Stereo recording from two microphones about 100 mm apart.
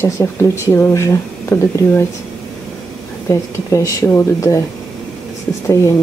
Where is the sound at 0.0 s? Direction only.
25° left (ahead or behind).